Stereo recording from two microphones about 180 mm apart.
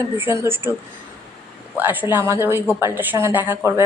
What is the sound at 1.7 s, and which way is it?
A woman's voice, 10° right (ahead or behind).